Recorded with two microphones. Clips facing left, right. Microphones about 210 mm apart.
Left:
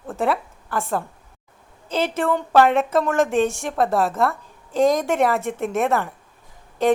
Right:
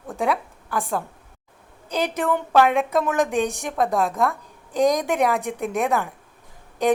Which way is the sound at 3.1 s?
15° right (ahead or behind).